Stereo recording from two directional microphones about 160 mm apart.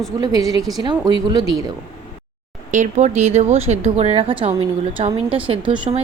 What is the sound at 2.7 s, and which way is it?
Speech, 50° right (ahead or behind).